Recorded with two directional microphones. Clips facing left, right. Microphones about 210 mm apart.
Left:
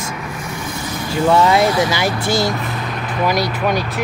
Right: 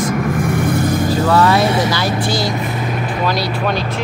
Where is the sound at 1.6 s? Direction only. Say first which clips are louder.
Even; 25° right (ahead or behind).